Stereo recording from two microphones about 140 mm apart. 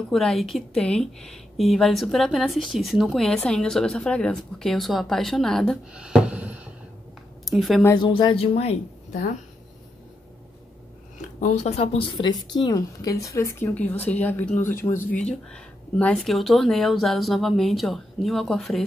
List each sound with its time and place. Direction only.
0.1 s a woman's voice: centre (ahead or behind)
8.0 s speech: 35° left (ahead or behind)
11.1 s speech: 55° left (ahead or behind); by 15.0 s 15° left (ahead or behind)
15.5 s a woman's voice: 5° left (ahead or behind)